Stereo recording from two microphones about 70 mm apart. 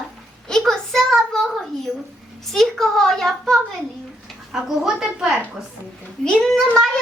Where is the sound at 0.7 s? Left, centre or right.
Centre.